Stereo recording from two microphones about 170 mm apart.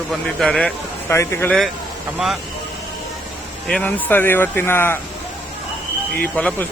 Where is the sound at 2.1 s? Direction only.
Centre (ahead or behind).